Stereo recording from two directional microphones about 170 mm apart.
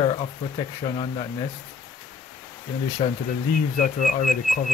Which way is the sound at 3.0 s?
35° left (ahead or behind).